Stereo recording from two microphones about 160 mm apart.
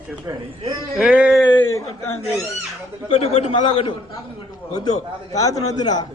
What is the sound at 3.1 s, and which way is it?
A man's voice, 35° left (ahead or behind).